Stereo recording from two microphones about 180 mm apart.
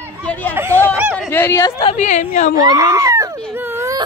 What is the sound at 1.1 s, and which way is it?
Speech, 10° left (ahead or behind).